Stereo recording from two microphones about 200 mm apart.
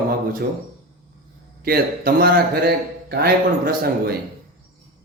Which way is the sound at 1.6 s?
50° right (ahead or behind).